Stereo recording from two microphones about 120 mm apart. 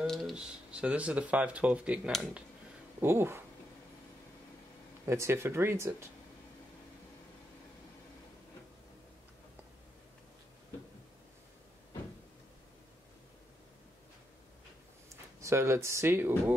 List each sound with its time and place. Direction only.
0.0 s speech: centre (ahead or behind); by 3.4 s 20° right (ahead or behind)
5.0 s speech: 25° right (ahead or behind)
15.4 s speech: 25° right (ahead or behind)